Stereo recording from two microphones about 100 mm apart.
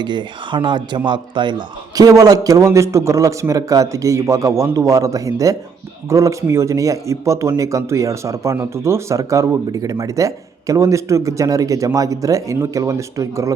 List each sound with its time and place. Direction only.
0.0 s speech: 50° right (ahead or behind); by 13.5 s 30° right (ahead or behind)